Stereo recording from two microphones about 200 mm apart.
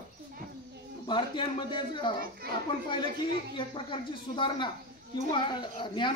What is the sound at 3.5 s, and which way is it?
Speech, 25° left (ahead or behind).